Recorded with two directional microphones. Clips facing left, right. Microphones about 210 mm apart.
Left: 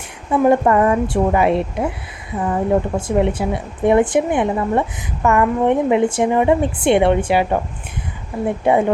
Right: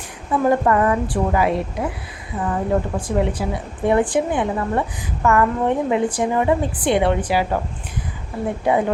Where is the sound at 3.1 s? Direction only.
25° left (ahead or behind).